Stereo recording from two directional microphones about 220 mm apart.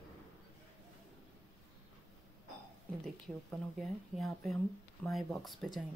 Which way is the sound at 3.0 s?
Centre (ahead or behind).